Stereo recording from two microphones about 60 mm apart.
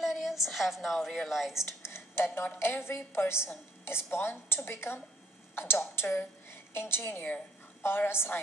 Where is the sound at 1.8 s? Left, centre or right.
Left.